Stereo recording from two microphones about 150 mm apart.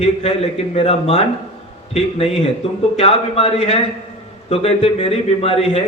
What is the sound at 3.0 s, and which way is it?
A man's voice, 40° left (ahead or behind).